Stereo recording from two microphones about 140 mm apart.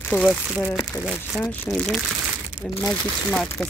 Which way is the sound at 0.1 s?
15° left (ahead or behind).